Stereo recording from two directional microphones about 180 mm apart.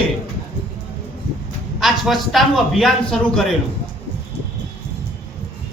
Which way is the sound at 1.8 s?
Centre (ahead or behind).